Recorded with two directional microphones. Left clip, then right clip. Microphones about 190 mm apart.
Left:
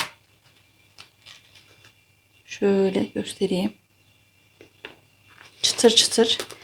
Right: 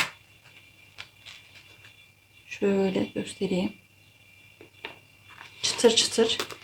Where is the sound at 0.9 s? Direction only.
Centre (ahead or behind).